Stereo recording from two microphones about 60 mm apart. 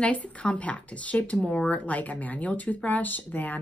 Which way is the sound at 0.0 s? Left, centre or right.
Centre.